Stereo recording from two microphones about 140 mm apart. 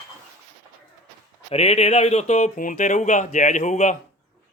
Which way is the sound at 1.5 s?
50° left (ahead or behind).